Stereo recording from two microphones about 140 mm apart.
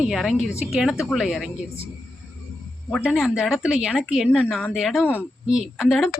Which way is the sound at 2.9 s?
5° left (ahead or behind).